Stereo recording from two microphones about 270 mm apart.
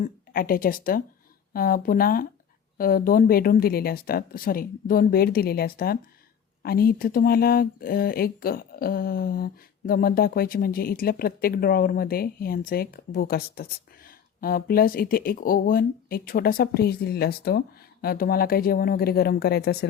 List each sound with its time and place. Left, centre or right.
0.0 s speech: left